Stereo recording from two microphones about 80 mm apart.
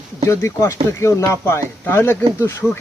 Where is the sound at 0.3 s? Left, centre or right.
Left.